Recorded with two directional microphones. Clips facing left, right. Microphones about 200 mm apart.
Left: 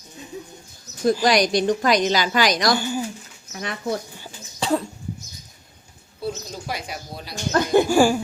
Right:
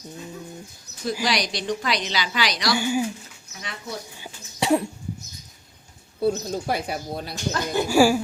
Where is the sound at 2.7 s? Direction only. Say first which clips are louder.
Right 1 dB; 10° right (ahead or behind).